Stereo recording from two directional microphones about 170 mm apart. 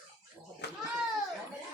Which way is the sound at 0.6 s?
80° left.